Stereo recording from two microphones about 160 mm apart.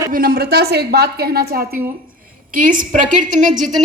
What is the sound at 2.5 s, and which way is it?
A woman's voice, 60° right (ahead or behind).